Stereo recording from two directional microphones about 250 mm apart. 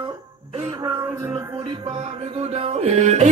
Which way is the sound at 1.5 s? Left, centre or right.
Centre.